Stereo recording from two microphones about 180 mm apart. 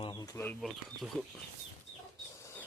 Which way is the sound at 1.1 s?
5° left (ahead or behind).